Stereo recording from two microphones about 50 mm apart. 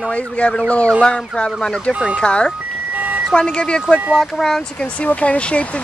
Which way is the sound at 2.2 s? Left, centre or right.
Centre.